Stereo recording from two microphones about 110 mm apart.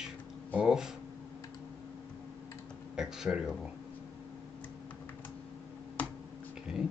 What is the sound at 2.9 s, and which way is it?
Speech, 5° right (ahead or behind).